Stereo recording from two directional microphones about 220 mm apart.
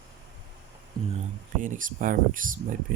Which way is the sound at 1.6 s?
35° right (ahead or behind).